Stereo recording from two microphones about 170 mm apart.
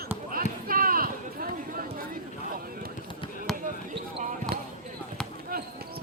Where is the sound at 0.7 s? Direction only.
55° right (ahead or behind).